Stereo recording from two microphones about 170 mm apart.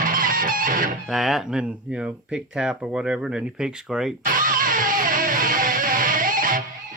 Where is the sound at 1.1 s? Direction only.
Centre (ahead or behind).